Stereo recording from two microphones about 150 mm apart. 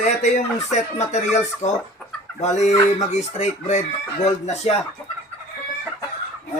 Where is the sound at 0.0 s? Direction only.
50° left (ahead or behind).